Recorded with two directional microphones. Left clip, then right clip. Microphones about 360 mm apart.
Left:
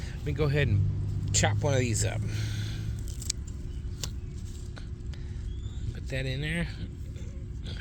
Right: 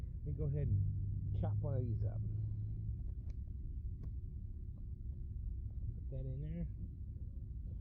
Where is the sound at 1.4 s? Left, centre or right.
Centre.